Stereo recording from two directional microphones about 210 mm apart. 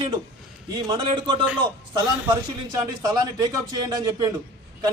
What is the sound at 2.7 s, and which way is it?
Speech, 20° right (ahead or behind).